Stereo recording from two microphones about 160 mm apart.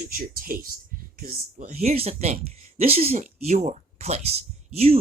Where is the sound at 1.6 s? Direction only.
40° right (ahead or behind).